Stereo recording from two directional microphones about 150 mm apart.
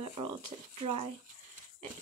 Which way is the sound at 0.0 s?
30° right (ahead or behind).